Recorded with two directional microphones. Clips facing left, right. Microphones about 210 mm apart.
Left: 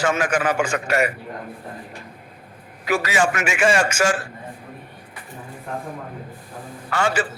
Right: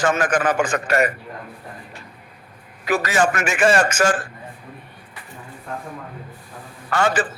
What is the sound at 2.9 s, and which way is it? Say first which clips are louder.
A man's voice: right 1 dB; 10° left (ahead or behind).